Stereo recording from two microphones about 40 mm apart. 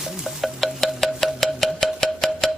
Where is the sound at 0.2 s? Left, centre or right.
Centre.